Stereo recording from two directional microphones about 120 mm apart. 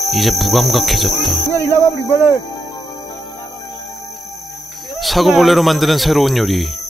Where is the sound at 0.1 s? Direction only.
Centre (ahead or behind).